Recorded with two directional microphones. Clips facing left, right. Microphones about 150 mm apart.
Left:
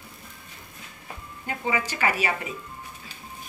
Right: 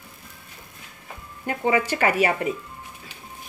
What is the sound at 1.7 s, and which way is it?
Speech, 50° right (ahead or behind).